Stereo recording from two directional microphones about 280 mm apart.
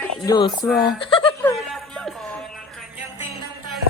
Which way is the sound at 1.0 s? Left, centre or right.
Centre.